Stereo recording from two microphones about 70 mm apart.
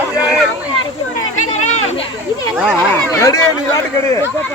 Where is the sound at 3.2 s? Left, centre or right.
Left.